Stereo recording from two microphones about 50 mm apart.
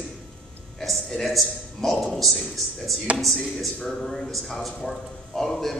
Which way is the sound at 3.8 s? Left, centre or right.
Centre.